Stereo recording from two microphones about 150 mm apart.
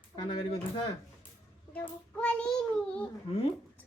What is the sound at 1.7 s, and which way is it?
Child singing, 10° left (ahead or behind).